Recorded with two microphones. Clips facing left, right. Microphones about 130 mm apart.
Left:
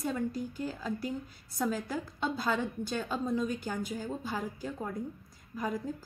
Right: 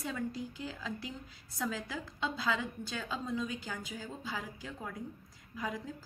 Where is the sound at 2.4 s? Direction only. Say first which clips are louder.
Left 3 dB; 45° left (ahead or behind).